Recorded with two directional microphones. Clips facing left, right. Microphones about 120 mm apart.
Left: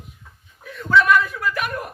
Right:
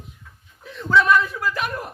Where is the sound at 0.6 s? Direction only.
25° right (ahead or behind).